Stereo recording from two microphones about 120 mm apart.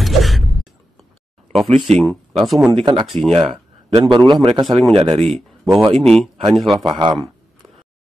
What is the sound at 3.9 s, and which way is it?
Speech, 40° right (ahead or behind).